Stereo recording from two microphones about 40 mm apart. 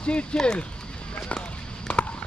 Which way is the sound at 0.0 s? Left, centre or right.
Left.